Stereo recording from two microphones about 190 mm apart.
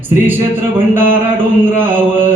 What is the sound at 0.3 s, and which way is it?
Chant, 10° right (ahead or behind).